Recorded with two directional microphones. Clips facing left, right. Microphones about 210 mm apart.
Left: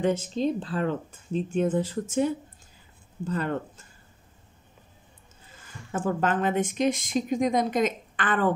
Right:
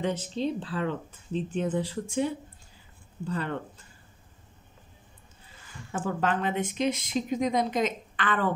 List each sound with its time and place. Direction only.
0.0 s speech: 45° left (ahead or behind)
5.9 s speech: 50° left (ahead or behind)